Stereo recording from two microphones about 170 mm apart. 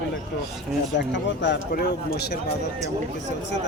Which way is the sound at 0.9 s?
90° left.